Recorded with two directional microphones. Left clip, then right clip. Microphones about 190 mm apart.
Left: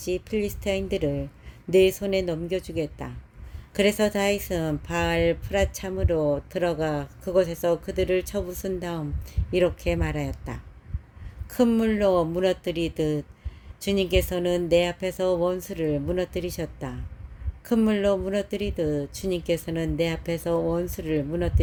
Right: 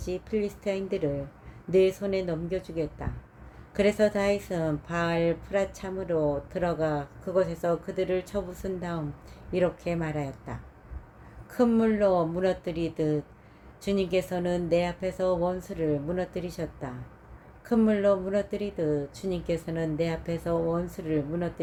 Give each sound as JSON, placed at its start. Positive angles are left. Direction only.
{"t": 0.0, "sound": "speech", "side_deg": 50}